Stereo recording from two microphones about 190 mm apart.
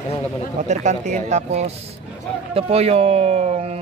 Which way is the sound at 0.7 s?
40° right (ahead or behind).